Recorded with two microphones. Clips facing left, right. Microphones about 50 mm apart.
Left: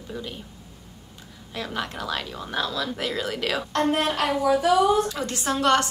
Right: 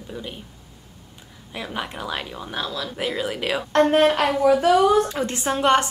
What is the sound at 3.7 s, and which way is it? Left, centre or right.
A woman's voice, right.